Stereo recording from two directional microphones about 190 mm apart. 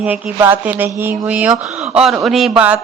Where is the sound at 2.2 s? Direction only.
Centre (ahead or behind).